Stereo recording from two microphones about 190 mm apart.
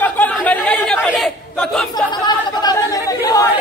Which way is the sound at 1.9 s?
20° left (ahead or behind).